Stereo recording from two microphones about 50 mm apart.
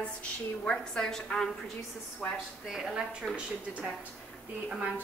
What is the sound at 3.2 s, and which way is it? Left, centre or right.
Speech, centre.